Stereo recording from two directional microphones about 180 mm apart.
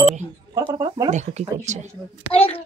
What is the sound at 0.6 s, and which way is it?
Speech, 25° right (ahead or behind).